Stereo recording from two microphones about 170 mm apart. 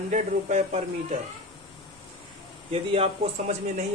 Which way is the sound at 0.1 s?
45° right (ahead or behind).